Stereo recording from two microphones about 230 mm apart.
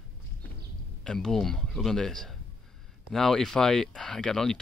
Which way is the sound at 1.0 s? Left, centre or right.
Centre.